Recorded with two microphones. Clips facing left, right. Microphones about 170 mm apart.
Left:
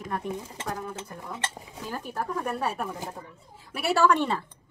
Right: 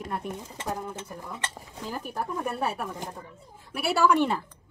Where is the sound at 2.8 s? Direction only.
5° left (ahead or behind); by 4.4 s 10° right (ahead or behind).